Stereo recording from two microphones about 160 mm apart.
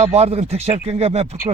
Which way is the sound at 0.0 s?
40° right (ahead or behind).